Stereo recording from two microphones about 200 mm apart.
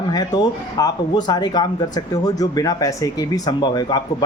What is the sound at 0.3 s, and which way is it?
Speech, 20° left (ahead or behind).